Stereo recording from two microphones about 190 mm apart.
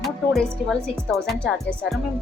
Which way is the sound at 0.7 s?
Centre (ahead or behind).